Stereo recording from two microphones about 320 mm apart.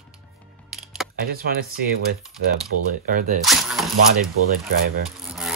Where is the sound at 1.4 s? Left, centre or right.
Right.